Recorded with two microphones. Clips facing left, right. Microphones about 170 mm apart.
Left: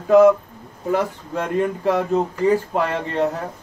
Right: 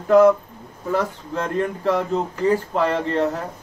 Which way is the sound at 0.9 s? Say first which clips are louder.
Left 1 dB; 15° left (ahead or behind).